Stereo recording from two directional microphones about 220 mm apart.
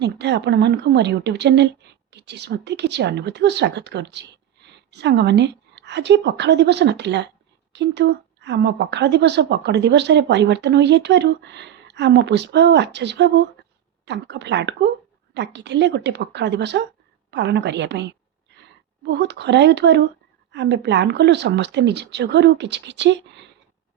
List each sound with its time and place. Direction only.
0.0 s a woman's voice: 50° right (ahead or behind)